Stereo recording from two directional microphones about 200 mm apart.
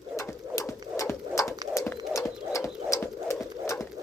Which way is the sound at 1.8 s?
15° left (ahead or behind).